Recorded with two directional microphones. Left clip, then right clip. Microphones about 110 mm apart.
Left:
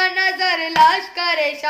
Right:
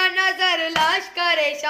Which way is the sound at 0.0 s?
25° left (ahead or behind).